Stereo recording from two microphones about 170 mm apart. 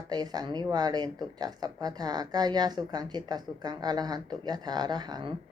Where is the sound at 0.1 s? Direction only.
25° right (ahead or behind).